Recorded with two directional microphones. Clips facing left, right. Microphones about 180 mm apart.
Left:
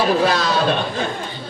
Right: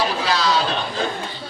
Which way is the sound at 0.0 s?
50° left (ahead or behind).